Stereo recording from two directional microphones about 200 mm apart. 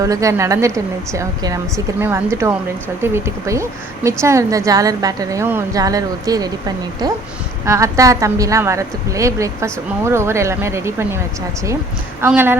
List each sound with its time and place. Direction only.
0.0 s a woman's voice: 15° right (ahead or behind)
12.2 s a woman's voice: 10° right (ahead or behind)